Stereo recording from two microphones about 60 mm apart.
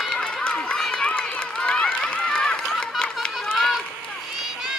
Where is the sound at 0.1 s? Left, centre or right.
Centre.